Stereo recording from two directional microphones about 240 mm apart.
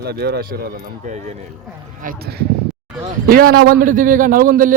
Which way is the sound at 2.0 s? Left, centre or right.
Right.